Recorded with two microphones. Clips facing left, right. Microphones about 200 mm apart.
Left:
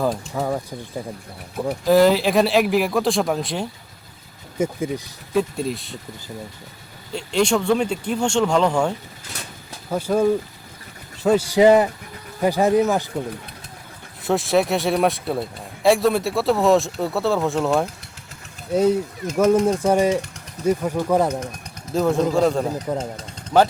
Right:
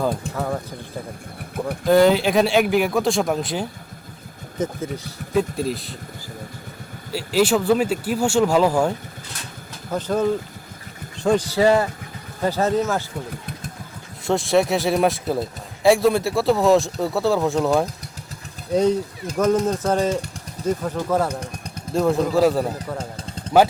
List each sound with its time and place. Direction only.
0.3 s speech: 10° left (ahead or behind)
1.5 s speech: centre (ahead or behind)
4.5 s speech: 10° left (ahead or behind)
5.3 s speech: centre (ahead or behind)
7.1 s speech: 5° right (ahead or behind)
9.9 s speech: 10° left (ahead or behind)
14.3 s speech: centre (ahead or behind)
21.9 s speech: centre (ahead or behind)
22.9 s speech: 15° left (ahead or behind)